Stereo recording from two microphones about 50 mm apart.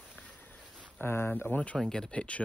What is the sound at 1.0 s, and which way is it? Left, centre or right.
Speech, left.